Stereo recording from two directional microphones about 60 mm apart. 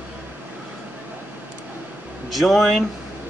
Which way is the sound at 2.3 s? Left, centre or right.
Centre.